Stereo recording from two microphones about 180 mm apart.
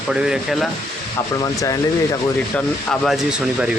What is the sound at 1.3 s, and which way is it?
Speech, 20° left (ahead or behind).